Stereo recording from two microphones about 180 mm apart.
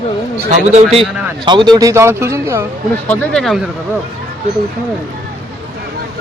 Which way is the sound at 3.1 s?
5° left (ahead or behind).